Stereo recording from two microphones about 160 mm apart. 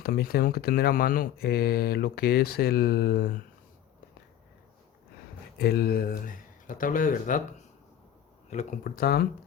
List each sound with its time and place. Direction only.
0.0 s speech: 70° left (ahead or behind)
5.5 s speech: 80° left; by 7.4 s 55° left (ahead or behind)
8.4 s speech: 45° left (ahead or behind)
9.0 s speech: 75° left (ahead or behind)